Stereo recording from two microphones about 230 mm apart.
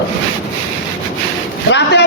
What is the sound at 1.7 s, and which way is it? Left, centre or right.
Speech, left.